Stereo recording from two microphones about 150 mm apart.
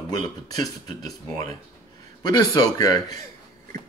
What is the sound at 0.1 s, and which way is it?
Speech, 25° left (ahead or behind).